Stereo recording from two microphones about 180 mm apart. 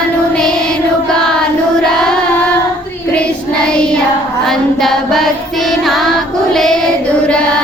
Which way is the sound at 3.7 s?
5° left (ahead or behind).